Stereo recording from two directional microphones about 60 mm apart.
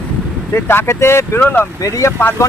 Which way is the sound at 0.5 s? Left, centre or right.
Left.